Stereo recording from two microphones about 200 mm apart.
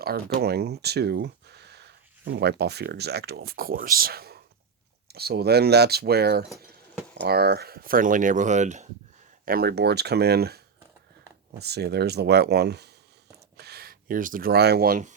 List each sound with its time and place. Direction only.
0.0 s speech: 50° right (ahead or behind)
9.5 s speech: 50° right (ahead or behind)